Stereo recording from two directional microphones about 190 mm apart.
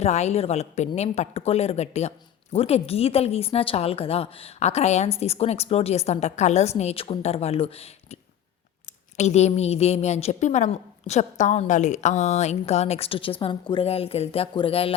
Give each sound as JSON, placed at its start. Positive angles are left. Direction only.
{"t": 0.0, "sound": "a woman's voice", "side_deg": 35}